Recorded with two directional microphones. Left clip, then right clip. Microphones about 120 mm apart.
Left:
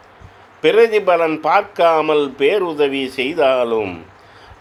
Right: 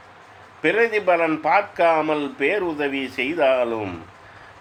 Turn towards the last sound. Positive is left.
turn(degrees=40)  # may be behind; listen again after turning